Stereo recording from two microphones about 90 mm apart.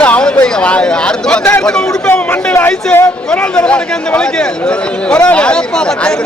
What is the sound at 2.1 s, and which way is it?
Speech, 20° left (ahead or behind).